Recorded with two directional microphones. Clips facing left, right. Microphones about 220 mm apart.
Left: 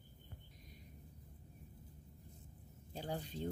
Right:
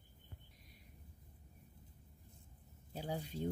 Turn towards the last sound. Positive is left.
turn(degrees=-10)  # may be behind; listen again after turning